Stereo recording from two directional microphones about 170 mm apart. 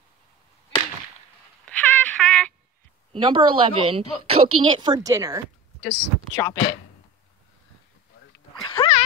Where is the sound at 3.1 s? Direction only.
30° right (ahead or behind).